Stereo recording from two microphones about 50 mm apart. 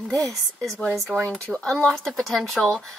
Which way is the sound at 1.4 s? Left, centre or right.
Left.